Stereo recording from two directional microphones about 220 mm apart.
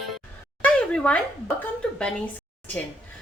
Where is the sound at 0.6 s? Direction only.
5° left (ahead or behind).